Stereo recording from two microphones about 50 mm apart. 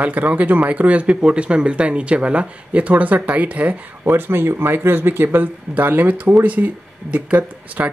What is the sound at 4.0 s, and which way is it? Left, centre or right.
Speech, right.